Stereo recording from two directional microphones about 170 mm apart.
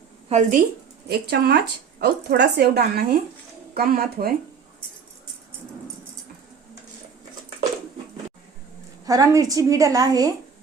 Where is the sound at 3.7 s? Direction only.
60° right (ahead or behind).